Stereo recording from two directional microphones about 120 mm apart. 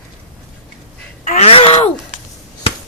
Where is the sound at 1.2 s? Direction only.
80° left.